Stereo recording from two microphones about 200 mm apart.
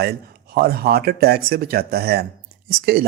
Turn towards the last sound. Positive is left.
turn(degrees=-50)  # may be behind; listen again after turning